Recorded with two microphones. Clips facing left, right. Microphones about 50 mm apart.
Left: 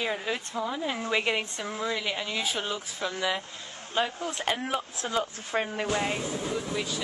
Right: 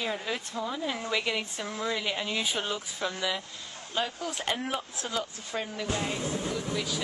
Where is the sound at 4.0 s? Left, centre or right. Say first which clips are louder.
Left 3 dB; left.